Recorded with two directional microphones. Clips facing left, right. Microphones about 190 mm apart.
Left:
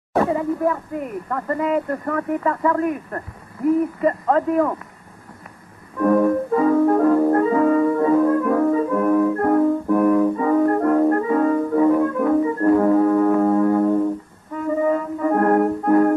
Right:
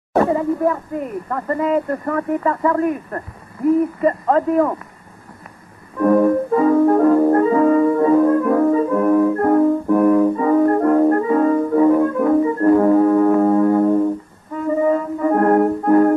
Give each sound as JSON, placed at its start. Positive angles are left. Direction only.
{"t": 0.1, "sound": "speech", "side_deg": -45}
{"t": 5.9, "sound": "music", "side_deg": -35}